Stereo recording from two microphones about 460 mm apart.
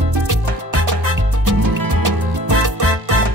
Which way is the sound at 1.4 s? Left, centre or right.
Right.